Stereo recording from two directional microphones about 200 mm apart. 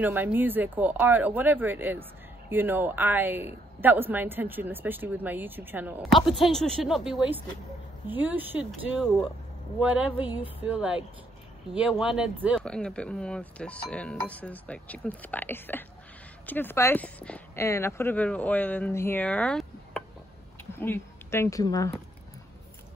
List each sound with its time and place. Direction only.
0.0 s speech: 10° right (ahead or behind)
12.6 s speech: 5° left (ahead or behind)